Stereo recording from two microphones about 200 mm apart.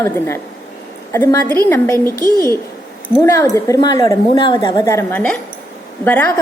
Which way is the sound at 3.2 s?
15° left (ahead or behind).